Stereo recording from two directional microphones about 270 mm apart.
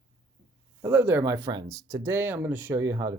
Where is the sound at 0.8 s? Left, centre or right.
Centre.